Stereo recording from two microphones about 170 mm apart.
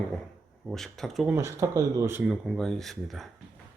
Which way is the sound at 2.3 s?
Centre (ahead or behind).